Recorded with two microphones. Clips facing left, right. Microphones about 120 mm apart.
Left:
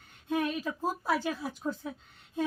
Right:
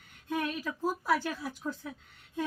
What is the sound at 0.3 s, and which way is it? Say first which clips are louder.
Speech: left 3 dB; 20° left (ahead or behind).